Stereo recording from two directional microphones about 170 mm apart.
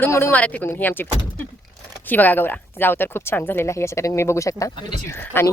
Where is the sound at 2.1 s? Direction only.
10° left (ahead or behind).